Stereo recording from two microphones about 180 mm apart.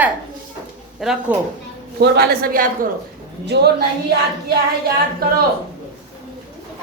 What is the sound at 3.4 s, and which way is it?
Speech, 65° right (ahead or behind).